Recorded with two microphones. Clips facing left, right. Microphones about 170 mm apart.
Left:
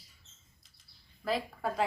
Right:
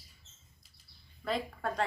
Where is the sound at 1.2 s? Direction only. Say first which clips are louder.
Left 1 dB; 5° left (ahead or behind).